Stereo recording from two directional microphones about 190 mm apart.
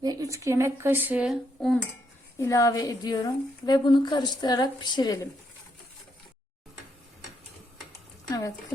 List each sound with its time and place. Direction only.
0.0 s speech: 20° right (ahead or behind); by 1.8 s centre (ahead or behind)
2.4 s a woman's voice: 15° left (ahead or behind)
8.3 s speech: 20° left (ahead or behind)